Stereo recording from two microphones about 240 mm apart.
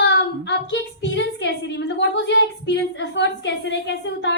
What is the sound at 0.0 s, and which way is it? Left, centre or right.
A woman's voice, left.